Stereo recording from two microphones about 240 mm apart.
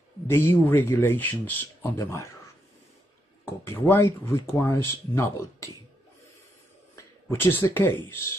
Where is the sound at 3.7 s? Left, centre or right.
Centre.